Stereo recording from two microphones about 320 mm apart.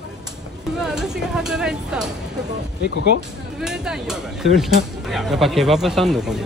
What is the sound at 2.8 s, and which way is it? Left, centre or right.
Speech, left.